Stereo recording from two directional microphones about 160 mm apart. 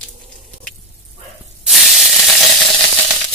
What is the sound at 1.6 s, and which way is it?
Spray, centre (ahead or behind).